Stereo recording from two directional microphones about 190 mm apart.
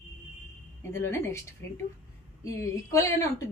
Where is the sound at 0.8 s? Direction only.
15° left (ahead or behind).